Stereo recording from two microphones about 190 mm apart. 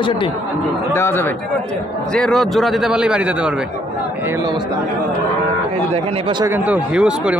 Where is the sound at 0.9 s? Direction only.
10° left (ahead or behind); by 3.5 s 5° right (ahead or behind).